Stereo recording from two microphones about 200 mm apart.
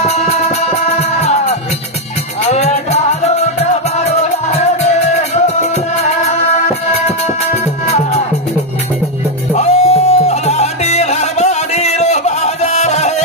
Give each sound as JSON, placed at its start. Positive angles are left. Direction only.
{"t": 0.1, "sound": "music", "side_deg": 35}
{"t": 9.5, "sound": "music", "side_deg": 35}